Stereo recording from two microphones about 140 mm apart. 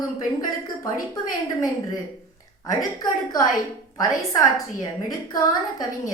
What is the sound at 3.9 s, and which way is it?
Speech, 25° left (ahead or behind).